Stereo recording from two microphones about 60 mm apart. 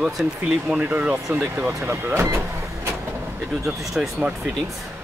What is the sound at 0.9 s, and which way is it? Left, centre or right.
Speech, right.